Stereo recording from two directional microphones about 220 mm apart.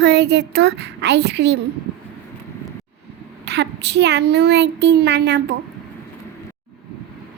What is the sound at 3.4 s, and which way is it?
Speech, 50° right (ahead or behind).